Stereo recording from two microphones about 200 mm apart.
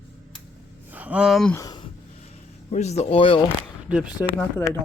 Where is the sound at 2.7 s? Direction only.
35° left (ahead or behind).